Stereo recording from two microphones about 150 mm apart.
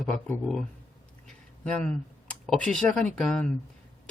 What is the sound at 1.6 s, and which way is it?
Speech, 10° left (ahead or behind).